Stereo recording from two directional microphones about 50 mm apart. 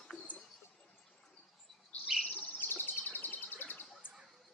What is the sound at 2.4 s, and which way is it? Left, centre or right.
Bird, left.